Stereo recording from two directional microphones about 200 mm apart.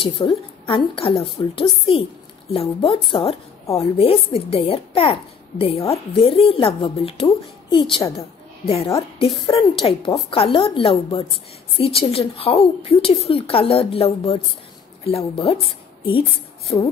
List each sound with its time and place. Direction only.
0.0 s a child's voice: 25° left (ahead or behind)